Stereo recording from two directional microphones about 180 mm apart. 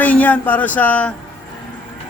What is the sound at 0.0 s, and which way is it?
Speech, 10° left (ahead or behind).